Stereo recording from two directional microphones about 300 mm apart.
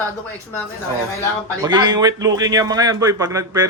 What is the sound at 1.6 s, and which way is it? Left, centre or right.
A man's voice, centre.